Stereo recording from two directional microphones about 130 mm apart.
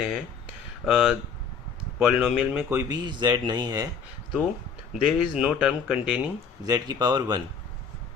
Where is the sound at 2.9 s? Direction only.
35° right (ahead or behind).